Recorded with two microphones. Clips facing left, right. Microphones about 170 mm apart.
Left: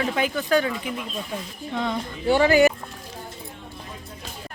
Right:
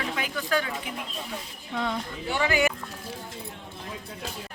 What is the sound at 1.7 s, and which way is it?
Speech, centre (ahead or behind).